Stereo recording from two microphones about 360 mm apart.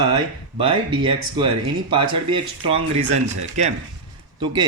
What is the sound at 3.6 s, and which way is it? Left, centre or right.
Speech, centre.